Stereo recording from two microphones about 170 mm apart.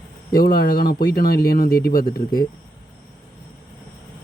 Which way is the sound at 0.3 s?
65° left (ahead or behind).